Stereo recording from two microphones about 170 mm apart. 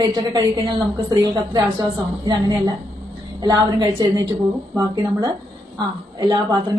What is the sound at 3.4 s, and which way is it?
A woman's voice, 20° right (ahead or behind).